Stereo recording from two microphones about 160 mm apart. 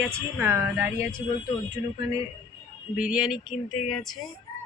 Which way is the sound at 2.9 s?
5° right (ahead or behind).